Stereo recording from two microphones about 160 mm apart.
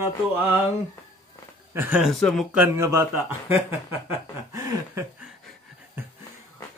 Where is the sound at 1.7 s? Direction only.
15° right (ahead or behind).